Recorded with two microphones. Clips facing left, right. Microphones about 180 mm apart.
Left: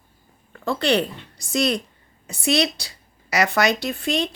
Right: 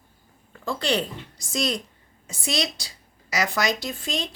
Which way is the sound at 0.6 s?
65° left (ahead or behind).